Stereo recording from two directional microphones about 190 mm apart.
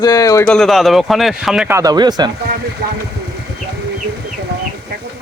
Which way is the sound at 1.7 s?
20° right (ahead or behind).